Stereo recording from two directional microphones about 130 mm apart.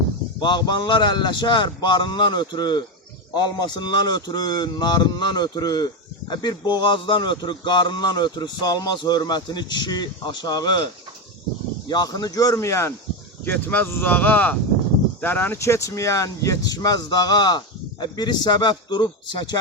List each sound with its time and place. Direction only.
0.3 s speech: 35° left (ahead or behind)
11.9 s speech: 30° left (ahead or behind)